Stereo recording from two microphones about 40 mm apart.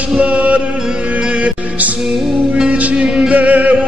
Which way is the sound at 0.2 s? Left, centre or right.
Right.